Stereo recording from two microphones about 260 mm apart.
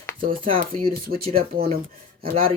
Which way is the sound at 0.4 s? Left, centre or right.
Right.